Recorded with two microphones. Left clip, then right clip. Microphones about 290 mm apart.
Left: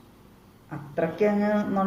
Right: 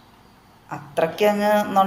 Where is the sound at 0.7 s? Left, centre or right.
Right.